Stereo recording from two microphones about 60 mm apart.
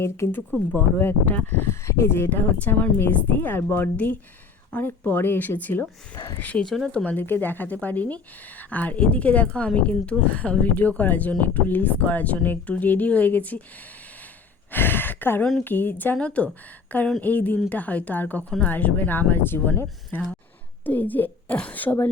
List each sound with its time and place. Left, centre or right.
0.7 s speech: left
1.6 s speech: left
5.0 s speech: left
6.7 s speech: centre
6.9 s speech: left
14.7 s a sound: left
15.6 s speech: left
16.2 s speech: left